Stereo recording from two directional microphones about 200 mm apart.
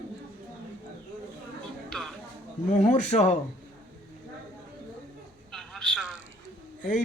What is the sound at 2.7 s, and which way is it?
Speech, 35° left (ahead or behind).